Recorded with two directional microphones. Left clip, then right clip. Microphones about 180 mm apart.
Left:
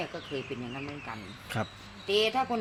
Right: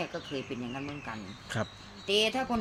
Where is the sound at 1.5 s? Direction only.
Centre (ahead or behind).